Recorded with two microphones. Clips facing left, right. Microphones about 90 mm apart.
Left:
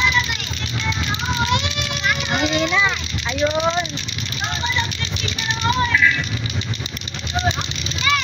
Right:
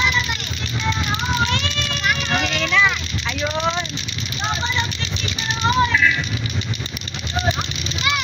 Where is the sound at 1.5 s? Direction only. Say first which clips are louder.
Left 2 dB; 15° left (ahead or behind).